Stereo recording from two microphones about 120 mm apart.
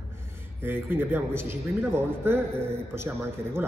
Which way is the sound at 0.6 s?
15° right (ahead or behind).